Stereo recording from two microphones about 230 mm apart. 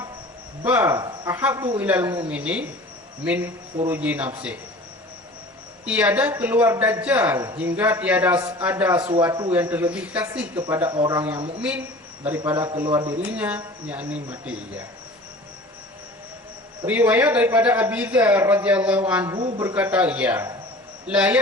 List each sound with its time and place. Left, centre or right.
0.6 s a man's voice: centre
5.8 s a man's voice: centre
16.8 s a man's voice: centre